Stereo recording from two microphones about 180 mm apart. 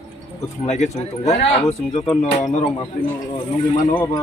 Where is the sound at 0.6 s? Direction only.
35° left (ahead or behind).